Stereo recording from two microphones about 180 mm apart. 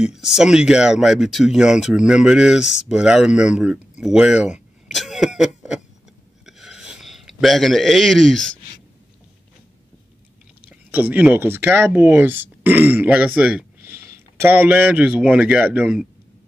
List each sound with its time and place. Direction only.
0.0 s speech: 5° right (ahead or behind)
6.4 s a sound: centre (ahead or behind)
10.9 s speech: 10° right (ahead or behind)